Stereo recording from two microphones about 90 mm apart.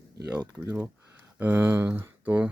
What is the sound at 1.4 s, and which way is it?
Speech, 25° right (ahead or behind).